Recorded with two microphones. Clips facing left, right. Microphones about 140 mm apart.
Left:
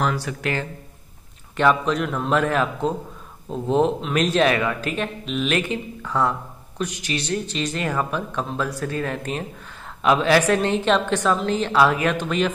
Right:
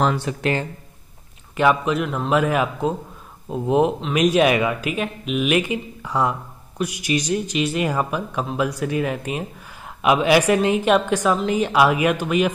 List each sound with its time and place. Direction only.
0.0 s speech: 25° right (ahead or behind)
1.6 s speech: 10° right (ahead or behind)